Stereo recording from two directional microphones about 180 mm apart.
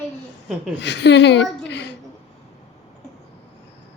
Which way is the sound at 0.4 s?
5° right (ahead or behind).